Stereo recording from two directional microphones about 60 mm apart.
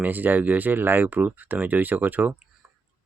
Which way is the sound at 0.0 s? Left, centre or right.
Right.